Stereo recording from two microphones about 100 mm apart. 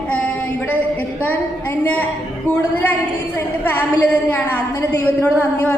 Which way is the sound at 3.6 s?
20° left (ahead or behind).